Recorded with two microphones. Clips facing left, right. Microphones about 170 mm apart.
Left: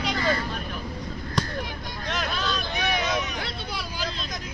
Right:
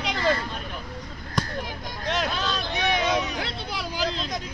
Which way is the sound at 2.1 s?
30° right (ahead or behind).